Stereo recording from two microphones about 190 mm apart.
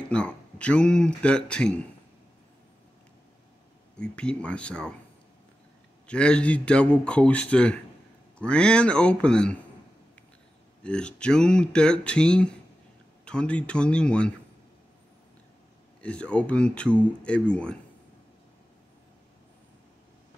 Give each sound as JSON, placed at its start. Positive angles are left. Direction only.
{"t": 0.1, "sound": "speech", "side_deg": 5}
{"t": 3.9, "sound": "speech", "side_deg": 5}
{"t": 6.0, "sound": "a man's voice", "side_deg": 5}
{"t": 10.8, "sound": "speech", "side_deg": 5}
{"t": 16.0, "sound": "speech", "side_deg": 5}